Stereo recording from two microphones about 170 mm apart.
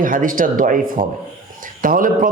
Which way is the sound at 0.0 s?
50° right (ahead or behind).